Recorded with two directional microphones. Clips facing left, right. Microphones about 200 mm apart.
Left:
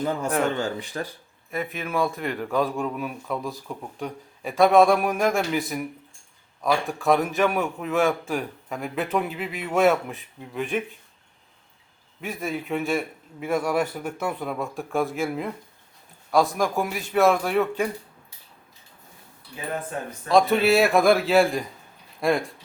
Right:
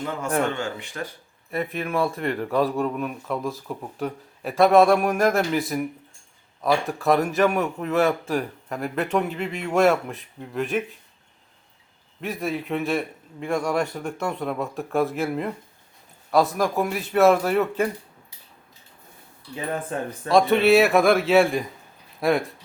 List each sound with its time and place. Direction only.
0.3 s speech: 35° left (ahead or behind)
1.5 s a man's voice: centre (ahead or behind)
12.2 s a man's voice: centre (ahead or behind)
20.2 s a man's voice: centre (ahead or behind)